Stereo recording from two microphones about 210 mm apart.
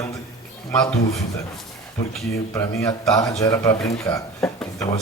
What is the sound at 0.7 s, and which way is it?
Speech, 5° left (ahead or behind).